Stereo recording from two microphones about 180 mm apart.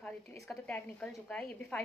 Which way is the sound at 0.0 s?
5° left (ahead or behind).